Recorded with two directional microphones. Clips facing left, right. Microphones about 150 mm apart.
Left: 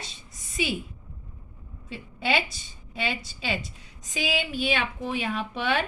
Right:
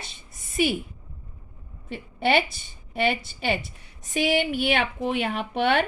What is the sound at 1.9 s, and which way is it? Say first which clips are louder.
A woman's voice: right 5 dB; 60° right (ahead or behind).